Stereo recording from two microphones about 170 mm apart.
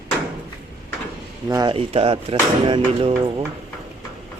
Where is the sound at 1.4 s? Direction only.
25° right (ahead or behind).